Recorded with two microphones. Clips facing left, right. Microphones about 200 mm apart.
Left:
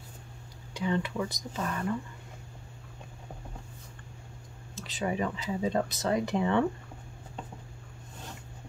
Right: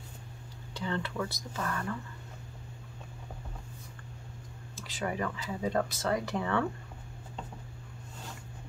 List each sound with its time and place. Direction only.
0.7 s speech: 15° left (ahead or behind)
4.8 s speech: 20° left (ahead or behind)